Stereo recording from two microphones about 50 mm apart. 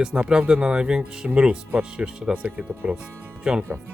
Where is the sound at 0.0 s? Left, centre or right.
Centre.